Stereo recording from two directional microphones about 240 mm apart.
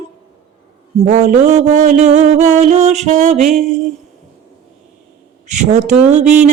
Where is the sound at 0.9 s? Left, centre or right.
Right.